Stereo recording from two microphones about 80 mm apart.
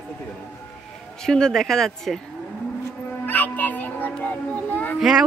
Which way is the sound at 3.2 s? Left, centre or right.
Left.